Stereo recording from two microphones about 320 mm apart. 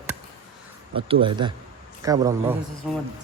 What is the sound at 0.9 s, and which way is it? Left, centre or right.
Speech, centre.